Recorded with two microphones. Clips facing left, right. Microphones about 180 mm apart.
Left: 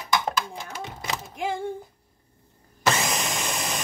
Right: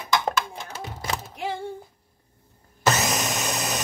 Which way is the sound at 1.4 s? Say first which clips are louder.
Left 3 dB; 50° left (ahead or behind).